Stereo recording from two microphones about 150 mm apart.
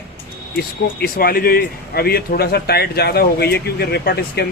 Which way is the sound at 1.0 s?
90° left.